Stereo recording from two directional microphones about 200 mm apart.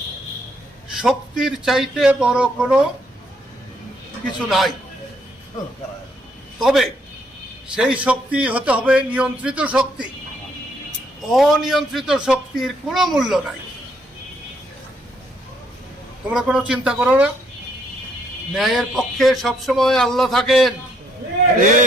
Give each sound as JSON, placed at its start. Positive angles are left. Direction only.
{"t": 0.9, "sound": "a man's voice", "side_deg": 0}
{"t": 4.4, "sound": "a man's voice", "side_deg": 0}
{"t": 6.6, "sound": "a man's voice", "side_deg": 0}
{"t": 11.3, "sound": "a man's voice", "side_deg": 0}
{"t": 16.3, "sound": "a man's voice", "side_deg": -5}
{"t": 18.5, "sound": "a man's voice", "side_deg": 0}
{"t": 21.6, "sound": "a man's voice", "side_deg": -40}